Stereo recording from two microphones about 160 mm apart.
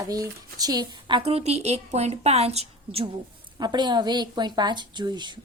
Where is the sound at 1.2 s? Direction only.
40° right (ahead or behind).